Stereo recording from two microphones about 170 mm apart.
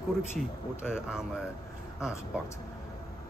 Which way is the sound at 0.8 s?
5° right (ahead or behind).